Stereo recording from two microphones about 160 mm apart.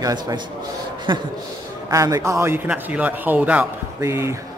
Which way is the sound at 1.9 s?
20° right (ahead or behind).